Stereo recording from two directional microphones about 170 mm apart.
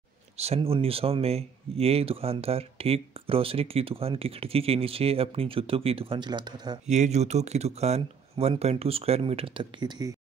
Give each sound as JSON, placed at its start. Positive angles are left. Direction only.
{"t": 0.4, "sound": "speech", "side_deg": -35}
{"t": 6.9, "sound": "speech", "side_deg": -40}